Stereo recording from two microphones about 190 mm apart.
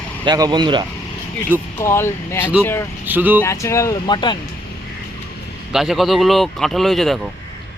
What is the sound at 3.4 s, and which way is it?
Speech, 15° left (ahead or behind).